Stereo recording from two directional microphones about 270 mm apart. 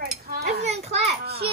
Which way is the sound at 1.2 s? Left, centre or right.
Right.